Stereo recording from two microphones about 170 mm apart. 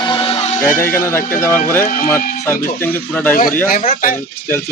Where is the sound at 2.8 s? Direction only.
10° left (ahead or behind).